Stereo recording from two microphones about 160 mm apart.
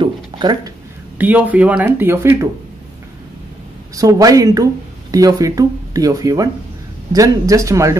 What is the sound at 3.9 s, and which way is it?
Speech, 20° right (ahead or behind).